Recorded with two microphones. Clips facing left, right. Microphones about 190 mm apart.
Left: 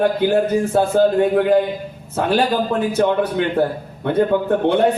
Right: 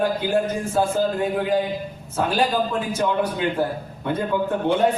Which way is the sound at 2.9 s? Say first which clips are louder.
Left 6 dB; 60° left (ahead or behind).